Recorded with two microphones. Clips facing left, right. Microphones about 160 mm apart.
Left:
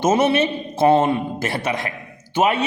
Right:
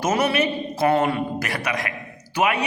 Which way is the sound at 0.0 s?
25° left (ahead or behind).